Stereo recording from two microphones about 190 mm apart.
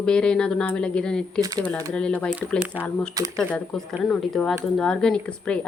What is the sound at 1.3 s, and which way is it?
Speech, 20° right (ahead or behind).